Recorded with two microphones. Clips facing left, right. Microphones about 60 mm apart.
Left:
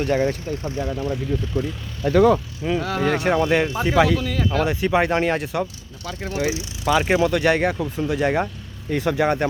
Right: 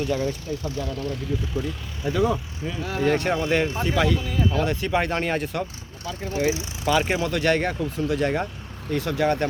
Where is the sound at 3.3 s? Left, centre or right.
Centre.